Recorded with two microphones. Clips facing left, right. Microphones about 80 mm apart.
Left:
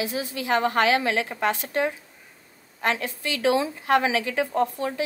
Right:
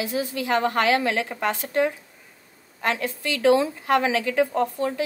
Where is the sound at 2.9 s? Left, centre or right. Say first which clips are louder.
Right 2 dB; left.